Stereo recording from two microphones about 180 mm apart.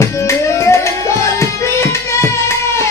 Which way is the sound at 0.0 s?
15° left (ahead or behind).